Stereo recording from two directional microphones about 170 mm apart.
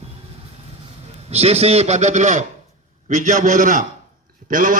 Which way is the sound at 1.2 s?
35° right (ahead or behind).